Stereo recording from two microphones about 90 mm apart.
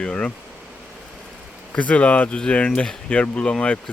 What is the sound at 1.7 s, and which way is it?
Speech, 15° left (ahead or behind).